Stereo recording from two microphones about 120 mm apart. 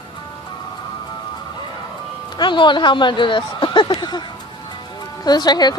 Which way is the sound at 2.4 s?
40° left (ahead or behind).